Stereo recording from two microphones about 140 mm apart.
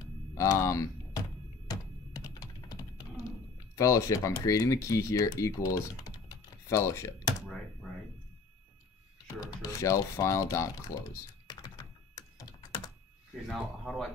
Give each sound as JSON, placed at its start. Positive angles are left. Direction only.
{"t": 0.3, "sound": "a sound", "side_deg": 20}
{"t": 1.7, "sound": "typing", "side_deg": 25}
{"t": 3.7, "sound": "speech", "side_deg": 25}
{"t": 6.2, "sound": "typing", "side_deg": 20}
{"t": 7.8, "sound": "a sound", "side_deg": -5}
{"t": 9.4, "sound": "speech", "side_deg": 25}
{"t": 12.2, "sound": "computer keyboard", "side_deg": 25}
{"t": 13.5, "sound": "speech", "side_deg": 0}